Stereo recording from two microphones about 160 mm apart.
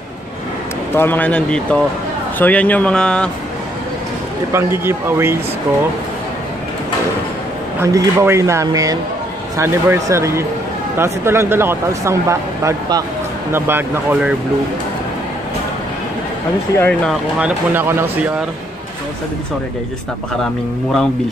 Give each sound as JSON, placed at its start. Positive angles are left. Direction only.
{"t": 0.9, "sound": "speech", "side_deg": 10}
{"t": 4.5, "sound": "speech", "side_deg": -15}
{"t": 7.8, "sound": "speech", "side_deg": -20}
{"t": 16.7, "sound": "speech", "side_deg": 10}
{"t": 17.1, "sound": "speech", "side_deg": -10}